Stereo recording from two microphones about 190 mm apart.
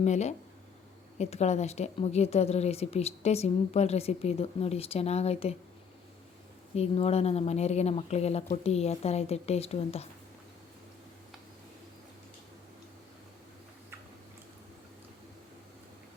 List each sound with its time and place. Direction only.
0.0 s a woman's voice: 35° left (ahead or behind)
6.7 s a woman's voice: 35° left (ahead or behind)